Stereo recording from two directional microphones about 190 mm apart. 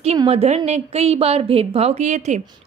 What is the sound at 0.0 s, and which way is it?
A woman's voice, 30° right (ahead or behind).